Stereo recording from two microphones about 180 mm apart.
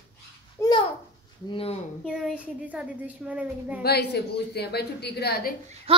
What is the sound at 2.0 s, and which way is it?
Speech, 5° right (ahead or behind).